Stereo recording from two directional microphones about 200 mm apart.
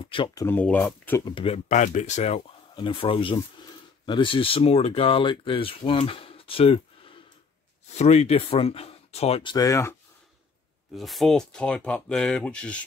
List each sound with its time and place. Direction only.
0.0 s speech: 25° left (ahead or behind); by 1.2 s 10° left (ahead or behind)
1.2 s speech: 25° left (ahead or behind)
11.0 s speech: centre (ahead or behind)